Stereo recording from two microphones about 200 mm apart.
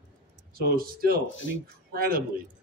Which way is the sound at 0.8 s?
50° right (ahead or behind).